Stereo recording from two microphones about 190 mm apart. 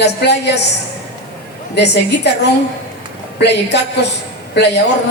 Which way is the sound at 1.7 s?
65° left (ahead or behind).